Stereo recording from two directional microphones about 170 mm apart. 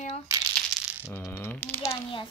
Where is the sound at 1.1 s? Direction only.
15° left (ahead or behind).